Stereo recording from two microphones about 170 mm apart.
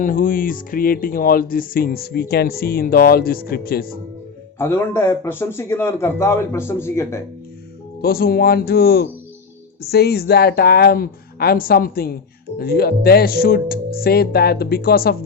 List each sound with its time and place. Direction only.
0.0 s speech: 55° left (ahead or behind)
4.5 s speech: 15° left (ahead or behind)
8.0 s speech: 60° left (ahead or behind)